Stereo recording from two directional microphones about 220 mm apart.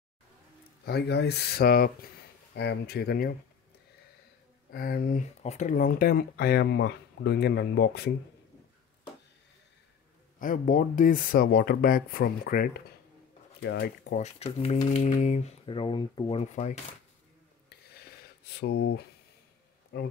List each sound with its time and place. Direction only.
0.8 s speech: 45° left (ahead or behind)
4.6 s speech: 40° left (ahead or behind)
10.4 s speech: 40° left (ahead or behind)
14.2 s speech: 30° left (ahead or behind)
18.4 s speech: 50° left (ahead or behind)